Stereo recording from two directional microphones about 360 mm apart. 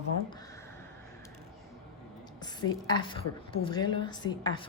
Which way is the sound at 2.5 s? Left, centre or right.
Centre.